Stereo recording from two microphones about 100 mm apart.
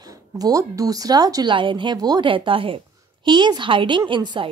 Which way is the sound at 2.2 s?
60° right (ahead or behind).